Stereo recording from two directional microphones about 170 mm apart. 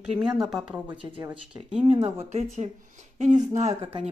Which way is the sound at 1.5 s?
5° right (ahead or behind).